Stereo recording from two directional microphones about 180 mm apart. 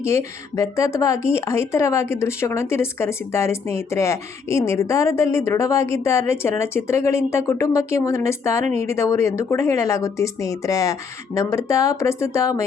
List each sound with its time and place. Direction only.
0.0 s a woman's voice: 15° left (ahead or behind)